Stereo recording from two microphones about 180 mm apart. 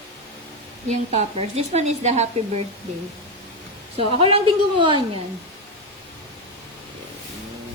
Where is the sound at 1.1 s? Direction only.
35° right (ahead or behind).